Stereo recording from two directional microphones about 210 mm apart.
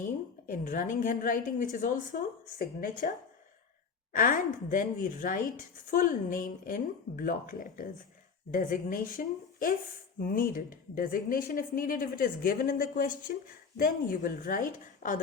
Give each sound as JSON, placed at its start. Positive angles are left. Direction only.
{"t": 0.5, "sound": "speech", "side_deg": 40}
{"t": 4.1, "sound": "speech", "side_deg": 40}